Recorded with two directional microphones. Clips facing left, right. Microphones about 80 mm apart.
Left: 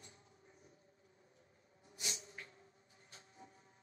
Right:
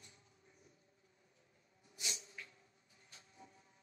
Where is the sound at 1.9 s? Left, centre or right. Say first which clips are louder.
Left 1 dB; left.